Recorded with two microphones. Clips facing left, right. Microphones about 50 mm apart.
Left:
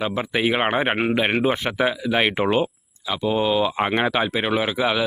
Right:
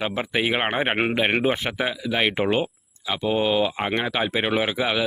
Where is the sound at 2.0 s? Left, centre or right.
Centre.